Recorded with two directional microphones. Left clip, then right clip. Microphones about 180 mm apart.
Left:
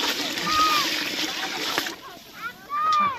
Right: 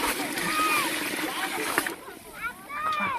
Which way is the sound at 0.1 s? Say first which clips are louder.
Left 3 dB; 15° left (ahead or behind).